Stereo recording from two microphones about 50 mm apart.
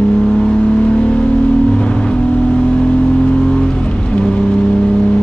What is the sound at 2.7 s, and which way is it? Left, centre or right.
Vehicle, centre.